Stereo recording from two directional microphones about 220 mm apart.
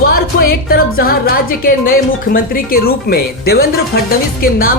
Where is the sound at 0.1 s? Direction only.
40° left (ahead or behind).